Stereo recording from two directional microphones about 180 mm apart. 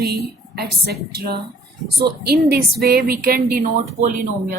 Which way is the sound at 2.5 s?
60° right (ahead or behind).